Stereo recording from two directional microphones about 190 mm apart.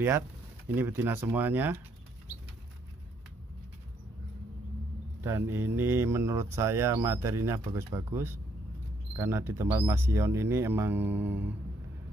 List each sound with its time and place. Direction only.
0.7 s speech: 10° right (ahead or behind)
5.2 s speech: 15° right (ahead or behind)